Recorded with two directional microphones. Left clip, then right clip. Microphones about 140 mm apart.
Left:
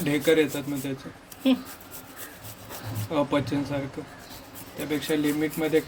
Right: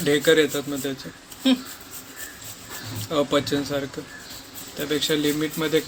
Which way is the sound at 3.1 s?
Centre (ahead or behind).